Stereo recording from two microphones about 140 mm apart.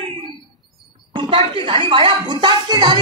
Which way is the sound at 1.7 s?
35° right (ahead or behind).